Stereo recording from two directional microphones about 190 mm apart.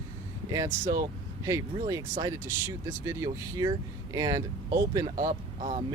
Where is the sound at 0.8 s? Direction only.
50° right (ahead or behind).